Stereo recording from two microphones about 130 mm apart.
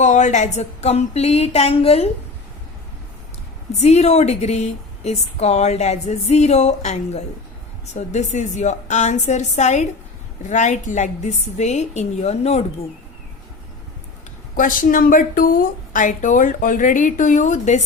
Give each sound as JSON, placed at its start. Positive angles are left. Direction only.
{"t": 0.0, "sound": "a woman's voice", "side_deg": 65}
{"t": 3.8, "sound": "a woman's voice", "side_deg": 60}
{"t": 14.5, "sound": "a woman's voice", "side_deg": 90}